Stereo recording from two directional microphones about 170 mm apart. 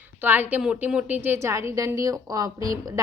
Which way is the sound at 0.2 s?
10° right (ahead or behind).